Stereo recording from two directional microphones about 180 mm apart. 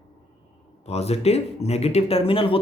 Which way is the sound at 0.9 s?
35° left (ahead or behind).